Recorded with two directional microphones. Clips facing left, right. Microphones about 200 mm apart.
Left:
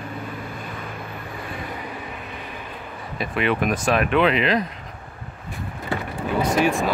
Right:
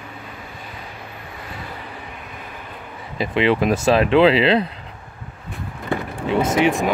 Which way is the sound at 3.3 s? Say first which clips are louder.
Right 5 dB; 30° right (ahead or behind).